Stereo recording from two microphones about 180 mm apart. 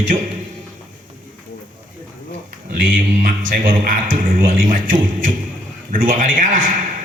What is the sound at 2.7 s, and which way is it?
A man's voice, 50° right (ahead or behind).